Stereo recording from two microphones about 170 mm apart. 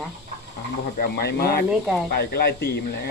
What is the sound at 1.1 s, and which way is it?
Speech, 70° left (ahead or behind).